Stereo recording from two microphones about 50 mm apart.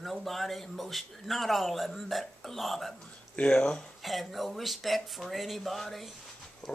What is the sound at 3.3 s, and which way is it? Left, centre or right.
Speech, left.